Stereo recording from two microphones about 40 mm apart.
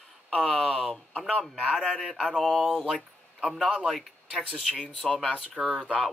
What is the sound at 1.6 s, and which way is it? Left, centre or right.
A man's voice, centre.